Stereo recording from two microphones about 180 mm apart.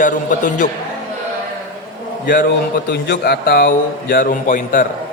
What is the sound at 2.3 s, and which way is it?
A man's voice, 60° left (ahead or behind).